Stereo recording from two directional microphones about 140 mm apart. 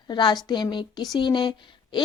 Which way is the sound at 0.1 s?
35° left (ahead or behind).